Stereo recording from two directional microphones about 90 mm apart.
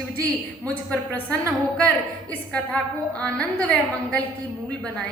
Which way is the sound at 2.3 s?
15° left (ahead or behind).